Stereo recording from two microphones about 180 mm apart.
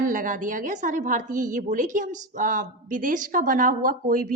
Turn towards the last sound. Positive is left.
turn(degrees=-50)  # may be behind; listen again after turning